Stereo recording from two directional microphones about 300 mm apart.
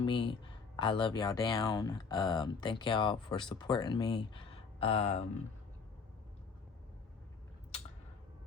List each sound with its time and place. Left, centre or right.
0.0 s speech: centre